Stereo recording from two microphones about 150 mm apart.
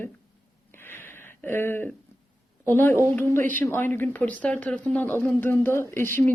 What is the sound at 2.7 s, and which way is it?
Speech, 15° left (ahead or behind).